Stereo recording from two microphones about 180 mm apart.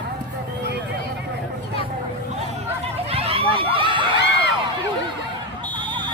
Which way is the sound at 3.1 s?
35° right (ahead or behind).